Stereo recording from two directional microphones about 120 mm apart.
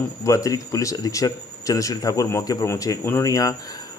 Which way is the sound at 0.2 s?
25° left (ahead or behind).